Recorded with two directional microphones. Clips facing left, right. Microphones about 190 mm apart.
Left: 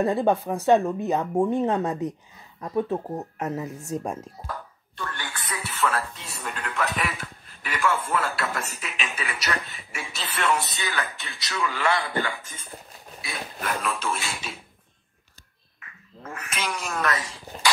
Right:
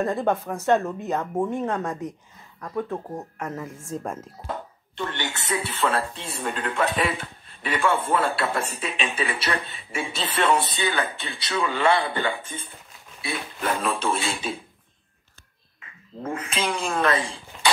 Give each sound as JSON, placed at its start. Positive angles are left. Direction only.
{"t": 0.0, "sound": "speech", "side_deg": 15}
{"t": 4.5, "sound": "speech", "side_deg": -25}
{"t": 15.8, "sound": "a woman's voice", "side_deg": -25}